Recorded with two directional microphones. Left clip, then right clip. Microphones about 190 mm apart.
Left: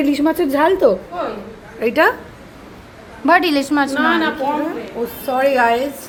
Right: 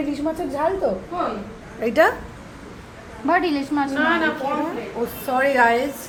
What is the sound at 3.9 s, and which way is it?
Speech, 25° left (ahead or behind).